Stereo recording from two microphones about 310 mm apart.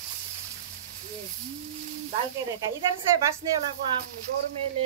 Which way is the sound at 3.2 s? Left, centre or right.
Centre.